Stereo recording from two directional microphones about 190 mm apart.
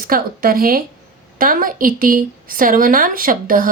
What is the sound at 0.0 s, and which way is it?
A woman's voice, 50° right (ahead or behind).